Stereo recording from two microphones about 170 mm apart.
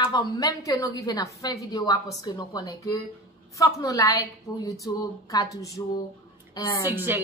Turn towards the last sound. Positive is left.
turn(degrees=-10)  # may be behind; listen again after turning